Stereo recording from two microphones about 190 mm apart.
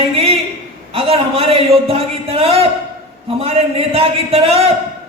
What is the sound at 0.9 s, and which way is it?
A man's voice, 30° right (ahead or behind).